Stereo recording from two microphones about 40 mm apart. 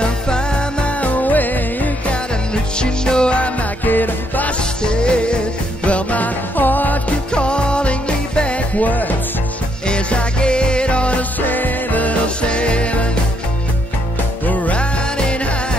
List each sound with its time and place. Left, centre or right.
0.0 s music: left
2.5 s music: left
3.8 s music: left
4.5 s music: left
5.9 s music: left
7.3 s music: left
9.8 s music: left
11.4 s music: left
12.4 s music: left
14.4 s music: left
14.8 s music: left